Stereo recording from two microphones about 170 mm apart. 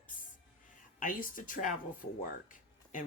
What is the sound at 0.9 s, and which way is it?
Speech, 55° left (ahead or behind).